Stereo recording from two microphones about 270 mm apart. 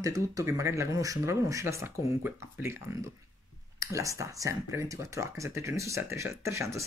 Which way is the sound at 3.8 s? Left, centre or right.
Centre.